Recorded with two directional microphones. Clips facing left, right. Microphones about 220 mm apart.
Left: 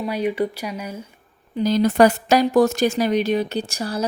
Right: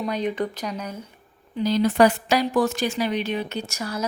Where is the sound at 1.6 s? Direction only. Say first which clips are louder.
Left 3 dB; 45° left (ahead or behind).